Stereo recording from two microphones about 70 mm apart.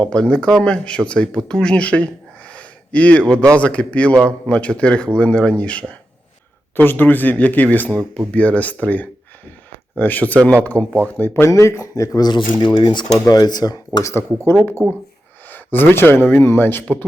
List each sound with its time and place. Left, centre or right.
0.0 s speech: centre
2.5 s a sound: centre
3.6 s speech: centre
11.4 s speech: left
12.2 s speech: left
13.2 s speech: left
14.0 s speech: left